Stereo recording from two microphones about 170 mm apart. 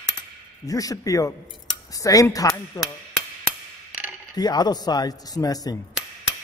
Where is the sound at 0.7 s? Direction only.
20° left (ahead or behind).